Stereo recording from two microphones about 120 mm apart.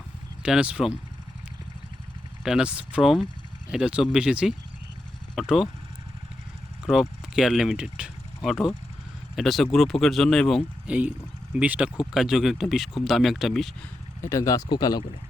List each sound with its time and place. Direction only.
0.4 s speech: 10° right (ahead or behind)
2.4 s speech: 5° right (ahead or behind)
6.8 s speech: 5° right (ahead or behind)
10.8 s speech: 10° right (ahead or behind)
14.2 s speech: 25° left (ahead or behind)